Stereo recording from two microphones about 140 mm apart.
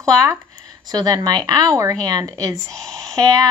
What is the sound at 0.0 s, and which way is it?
Speech, 25° right (ahead or behind).